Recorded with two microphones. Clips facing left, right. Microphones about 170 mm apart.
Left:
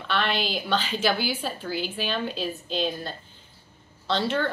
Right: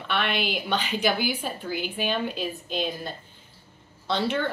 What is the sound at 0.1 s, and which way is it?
A woman's voice, 10° right (ahead or behind).